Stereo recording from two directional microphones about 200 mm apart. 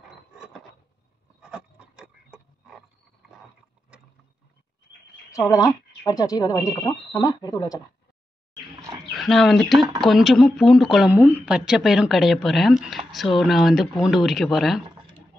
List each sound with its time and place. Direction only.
1.4 s a sound: 5° right (ahead or behind)
5.3 s speech: 15° left (ahead or behind)
9.1 s speech: centre (ahead or behind)